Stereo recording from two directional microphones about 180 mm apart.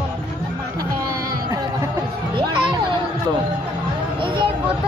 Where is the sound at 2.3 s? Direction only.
25° right (ahead or behind).